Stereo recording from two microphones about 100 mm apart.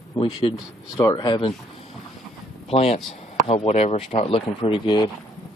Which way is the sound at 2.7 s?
90° left.